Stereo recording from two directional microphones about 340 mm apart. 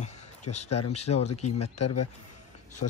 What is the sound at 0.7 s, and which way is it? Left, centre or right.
Speech, left.